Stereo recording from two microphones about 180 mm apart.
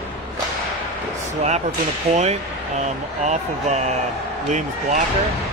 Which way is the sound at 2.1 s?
35° right (ahead or behind).